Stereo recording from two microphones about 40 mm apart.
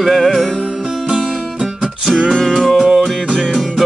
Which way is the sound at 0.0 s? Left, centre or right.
Centre.